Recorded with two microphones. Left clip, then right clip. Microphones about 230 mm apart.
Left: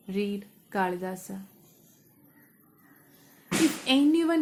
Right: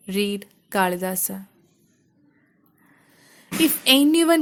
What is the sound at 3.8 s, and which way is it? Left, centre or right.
Speech, right.